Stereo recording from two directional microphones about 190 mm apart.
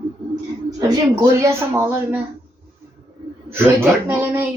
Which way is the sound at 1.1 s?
15° right (ahead or behind).